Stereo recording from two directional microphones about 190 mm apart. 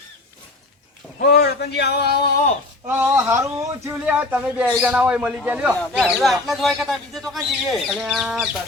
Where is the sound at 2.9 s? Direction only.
10° right (ahead or behind).